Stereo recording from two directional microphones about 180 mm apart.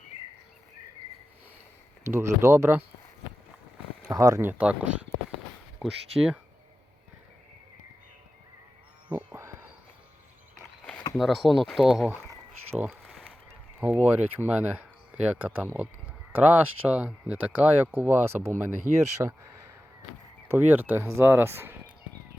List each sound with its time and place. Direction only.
2.0 s speech: 15° right (ahead or behind)
4.1 s speech: 15° right (ahead or behind)
9.0 s a sound: 10° right (ahead or behind)
11.1 s speech: centre (ahead or behind)
12.9 s a sound: centre (ahead or behind)
13.8 s speech: 10° right (ahead or behind)
20.5 s speech: 10° right (ahead or behind)